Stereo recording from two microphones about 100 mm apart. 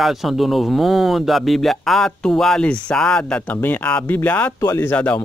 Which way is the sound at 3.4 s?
20° left (ahead or behind).